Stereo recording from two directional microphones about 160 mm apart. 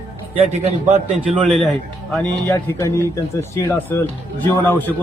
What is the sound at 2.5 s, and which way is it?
Speech, 20° left (ahead or behind).